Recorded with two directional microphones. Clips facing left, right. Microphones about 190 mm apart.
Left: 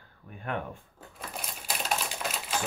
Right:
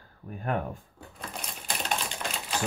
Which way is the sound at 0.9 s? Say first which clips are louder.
Right 1 dB; 5° left (ahead or behind).